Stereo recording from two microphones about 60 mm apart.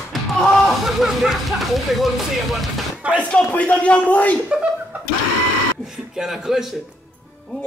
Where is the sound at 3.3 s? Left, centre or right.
Left.